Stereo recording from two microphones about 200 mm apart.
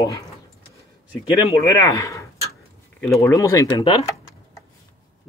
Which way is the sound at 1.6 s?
15° left (ahead or behind).